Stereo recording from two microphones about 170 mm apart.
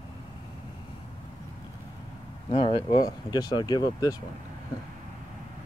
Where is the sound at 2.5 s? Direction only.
35° left (ahead or behind).